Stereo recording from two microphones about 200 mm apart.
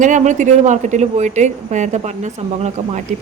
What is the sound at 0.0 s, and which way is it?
Speech, 40° right (ahead or behind).